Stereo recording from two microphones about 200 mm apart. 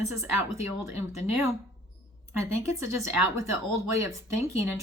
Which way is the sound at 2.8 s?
15° right (ahead or behind).